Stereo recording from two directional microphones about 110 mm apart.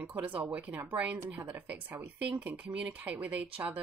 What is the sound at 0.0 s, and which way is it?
Speech, 15° right (ahead or behind).